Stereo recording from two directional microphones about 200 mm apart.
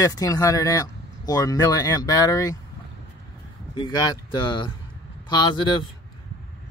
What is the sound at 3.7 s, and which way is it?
Speech, 20° left (ahead or behind).